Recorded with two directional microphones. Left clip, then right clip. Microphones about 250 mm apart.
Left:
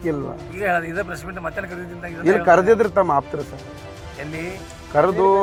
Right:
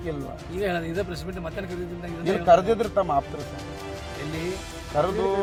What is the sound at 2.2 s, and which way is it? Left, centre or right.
Speech, centre.